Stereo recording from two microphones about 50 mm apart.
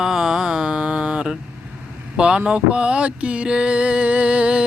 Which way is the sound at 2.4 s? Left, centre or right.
Right.